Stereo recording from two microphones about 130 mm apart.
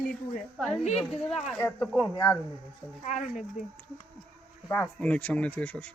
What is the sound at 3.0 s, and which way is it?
Speech, 75° left (ahead or behind).